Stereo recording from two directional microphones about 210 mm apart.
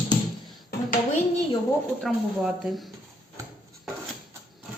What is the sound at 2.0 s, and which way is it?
Speech, centre (ahead or behind).